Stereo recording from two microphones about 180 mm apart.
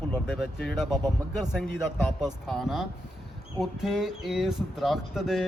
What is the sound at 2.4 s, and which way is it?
Speech, centre (ahead or behind).